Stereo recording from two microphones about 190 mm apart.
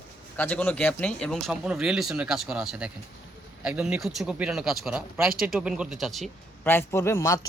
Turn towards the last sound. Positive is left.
turn(degrees=15)  # may be behind; listen again after turning